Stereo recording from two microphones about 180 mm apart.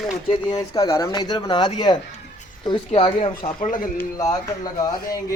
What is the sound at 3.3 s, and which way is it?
Speech, 50° left (ahead or behind).